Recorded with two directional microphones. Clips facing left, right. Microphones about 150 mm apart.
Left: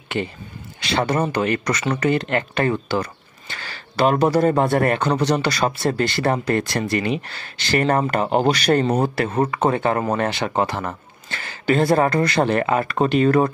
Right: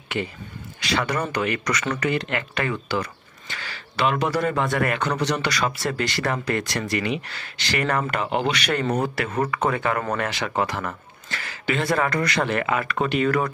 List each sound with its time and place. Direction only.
0.7 s speech: 25° left (ahead or behind)
11.6 s speech: 40° left (ahead or behind)
11.9 s speech: 25° left (ahead or behind)